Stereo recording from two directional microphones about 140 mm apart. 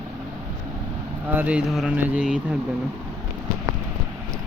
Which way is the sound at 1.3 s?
10° right (ahead or behind).